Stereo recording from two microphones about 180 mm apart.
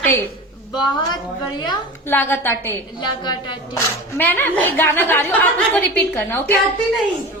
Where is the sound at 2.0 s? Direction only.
10° left (ahead or behind).